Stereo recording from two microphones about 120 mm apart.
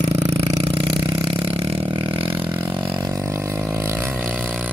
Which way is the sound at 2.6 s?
40° right (ahead or behind).